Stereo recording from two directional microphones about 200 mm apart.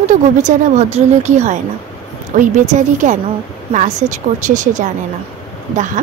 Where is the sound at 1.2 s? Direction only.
35° right (ahead or behind).